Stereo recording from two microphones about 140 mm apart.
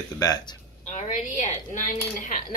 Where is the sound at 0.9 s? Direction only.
55° left (ahead or behind).